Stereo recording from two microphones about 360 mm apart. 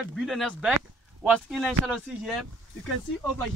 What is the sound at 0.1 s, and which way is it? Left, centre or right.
Speech, centre.